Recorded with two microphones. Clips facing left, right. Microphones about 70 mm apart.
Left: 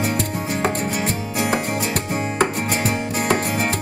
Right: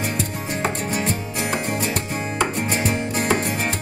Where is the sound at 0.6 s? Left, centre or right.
Centre.